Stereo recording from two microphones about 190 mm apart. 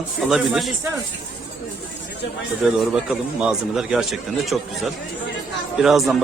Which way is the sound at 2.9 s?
5° right (ahead or behind).